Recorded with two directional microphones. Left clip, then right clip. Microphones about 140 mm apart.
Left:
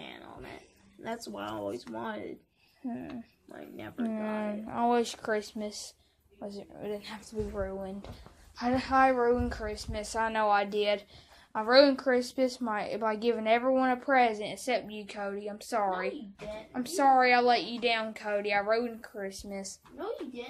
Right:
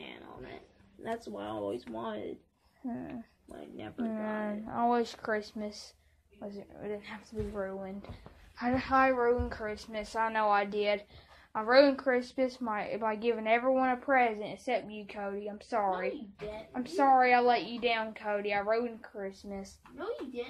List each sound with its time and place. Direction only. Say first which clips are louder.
0.0 s a sound: left 1 dB; 55° left (ahead or behind)
1.0 s speech: even; 50° left (ahead or behind)
2.8 s a woman's voice: left 1 dB; 10° left (ahead or behind)
19.2 s speech: left 3 dB; 20° left (ahead or behind)